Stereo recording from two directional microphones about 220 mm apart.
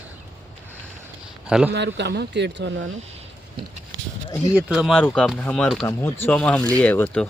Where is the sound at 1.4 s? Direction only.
5° right (ahead or behind).